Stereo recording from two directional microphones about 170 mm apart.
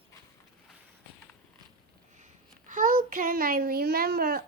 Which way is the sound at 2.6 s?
50° right (ahead or behind).